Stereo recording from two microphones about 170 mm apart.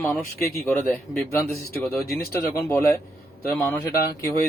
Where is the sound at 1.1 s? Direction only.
15° left (ahead or behind).